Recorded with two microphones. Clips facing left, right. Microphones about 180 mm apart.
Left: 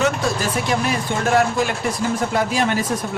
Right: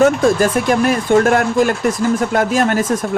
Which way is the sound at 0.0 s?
50° right (ahead or behind).